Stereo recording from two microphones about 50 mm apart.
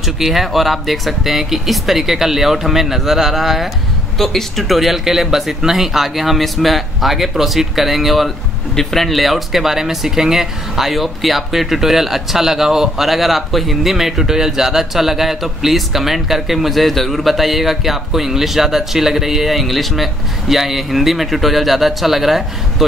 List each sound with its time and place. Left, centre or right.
0.0 s speech: centre